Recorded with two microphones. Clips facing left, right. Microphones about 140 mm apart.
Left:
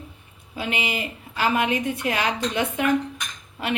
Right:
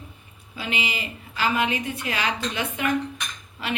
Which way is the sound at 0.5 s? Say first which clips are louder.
Left 3 dB; 55° left (ahead or behind).